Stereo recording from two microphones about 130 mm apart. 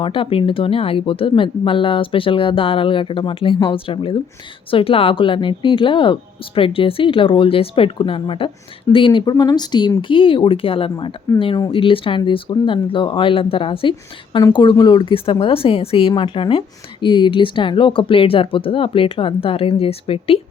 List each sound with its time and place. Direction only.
0.0 s a woman's voice: 45° left (ahead or behind)
9.3 s a woman's voice: 30° left (ahead or behind); by 20.4 s 45° left (ahead or behind)